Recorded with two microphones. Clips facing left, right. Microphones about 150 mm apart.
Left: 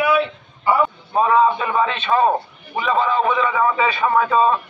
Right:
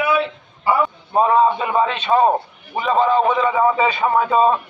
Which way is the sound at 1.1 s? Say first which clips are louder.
Right 1 dB; 25° right (ahead or behind).